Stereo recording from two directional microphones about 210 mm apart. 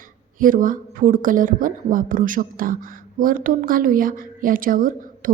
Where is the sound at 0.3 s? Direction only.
40° right (ahead or behind).